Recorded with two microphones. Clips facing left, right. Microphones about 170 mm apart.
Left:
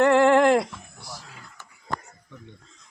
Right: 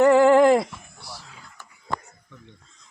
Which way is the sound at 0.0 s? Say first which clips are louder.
Right 2 dB; 5° right (ahead or behind).